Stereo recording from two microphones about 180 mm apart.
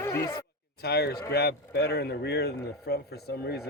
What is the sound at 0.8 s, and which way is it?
A man's voice, 60° left (ahead or behind).